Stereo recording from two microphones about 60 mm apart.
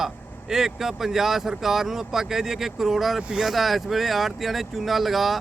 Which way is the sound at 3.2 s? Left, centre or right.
Centre.